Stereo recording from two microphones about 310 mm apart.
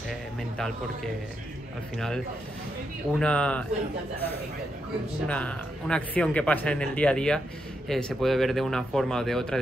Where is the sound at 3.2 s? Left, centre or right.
Centre.